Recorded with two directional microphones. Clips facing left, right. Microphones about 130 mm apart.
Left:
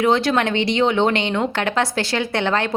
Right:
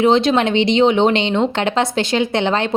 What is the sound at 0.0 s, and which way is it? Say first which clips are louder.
A woman's voice: right 4 dB; 20° right (ahead or behind).